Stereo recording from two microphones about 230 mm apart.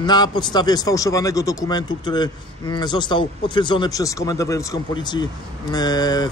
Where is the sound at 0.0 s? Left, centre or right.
Centre.